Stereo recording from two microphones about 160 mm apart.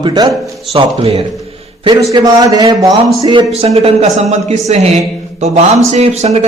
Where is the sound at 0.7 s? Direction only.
40° right (ahead or behind).